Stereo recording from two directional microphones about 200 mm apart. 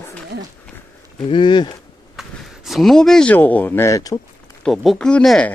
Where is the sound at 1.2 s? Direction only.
25° left (ahead or behind).